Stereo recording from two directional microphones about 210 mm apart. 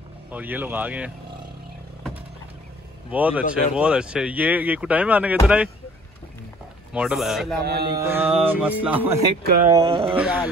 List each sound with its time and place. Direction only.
0.3 s speech: 10° right (ahead or behind)
3.1 s speech: 5° right (ahead or behind)
6.9 s speech: 5° right (ahead or behind)
7.6 s mantra: 50° right (ahead or behind)
8.0 s speech: 10° right (ahead or behind)
9.4 s mantra: 45° right (ahead or behind)
9.9 s speech: 10° right (ahead or behind)